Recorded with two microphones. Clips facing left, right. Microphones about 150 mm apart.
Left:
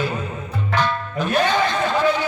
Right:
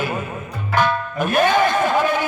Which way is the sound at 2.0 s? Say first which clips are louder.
Even; 50° right (ahead or behind).